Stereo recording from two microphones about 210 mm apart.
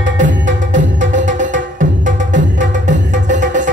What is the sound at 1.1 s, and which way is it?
Music, 35° right (ahead or behind).